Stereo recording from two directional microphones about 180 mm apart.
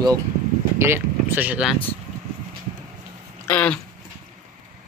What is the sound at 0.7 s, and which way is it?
Speech, 15° right (ahead or behind).